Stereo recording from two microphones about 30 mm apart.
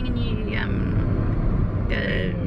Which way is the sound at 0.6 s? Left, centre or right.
Centre.